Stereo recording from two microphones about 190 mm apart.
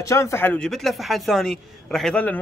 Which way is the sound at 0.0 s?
15° left (ahead or behind).